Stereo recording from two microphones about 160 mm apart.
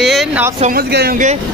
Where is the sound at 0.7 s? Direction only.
80° right.